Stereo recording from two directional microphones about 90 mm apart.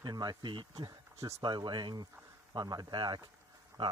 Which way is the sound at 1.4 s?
55° right (ahead or behind).